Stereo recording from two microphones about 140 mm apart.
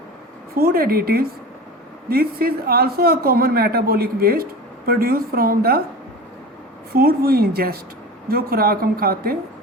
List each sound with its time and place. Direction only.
0.5 s a man's voice: 90° right
6.9 s a man's voice: 90° right